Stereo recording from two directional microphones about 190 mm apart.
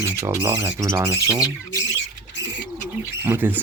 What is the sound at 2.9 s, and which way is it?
Speech, 10° right (ahead or behind).